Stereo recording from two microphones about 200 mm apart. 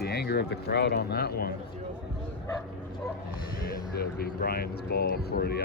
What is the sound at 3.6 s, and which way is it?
Speech, 50° left (ahead or behind).